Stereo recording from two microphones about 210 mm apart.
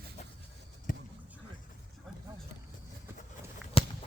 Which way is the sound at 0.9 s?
40° left (ahead or behind).